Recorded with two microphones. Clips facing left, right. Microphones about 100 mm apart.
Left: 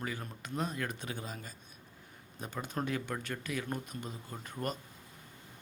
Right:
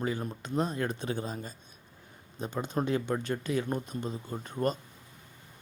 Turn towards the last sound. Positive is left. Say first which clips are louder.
# right 7 dB
turn(degrees=-30)  # may be behind; listen again after turning